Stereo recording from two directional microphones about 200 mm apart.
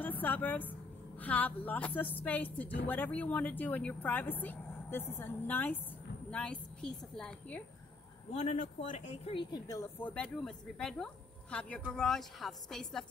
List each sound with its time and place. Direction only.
0.0 s a woman's voice: 10° left (ahead or behind)
8.3 s a woman's voice: 35° left (ahead or behind); by 13.0 s centre (ahead or behind)